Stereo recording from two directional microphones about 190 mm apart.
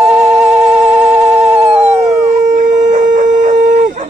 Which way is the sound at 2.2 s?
40° right (ahead or behind).